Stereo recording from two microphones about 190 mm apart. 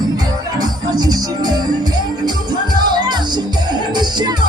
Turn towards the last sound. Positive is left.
turn(degrees=-20)  # may be behind; listen again after turning